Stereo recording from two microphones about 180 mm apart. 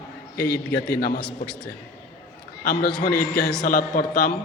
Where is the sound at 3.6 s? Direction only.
50° left (ahead or behind).